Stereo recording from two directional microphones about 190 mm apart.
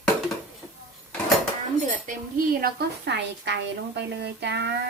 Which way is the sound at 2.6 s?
60° right (ahead or behind).